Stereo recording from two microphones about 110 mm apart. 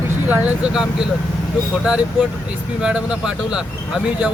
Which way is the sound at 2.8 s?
10° right (ahead or behind).